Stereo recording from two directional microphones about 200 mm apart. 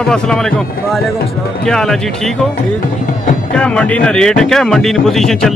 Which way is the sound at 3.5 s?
5° left (ahead or behind).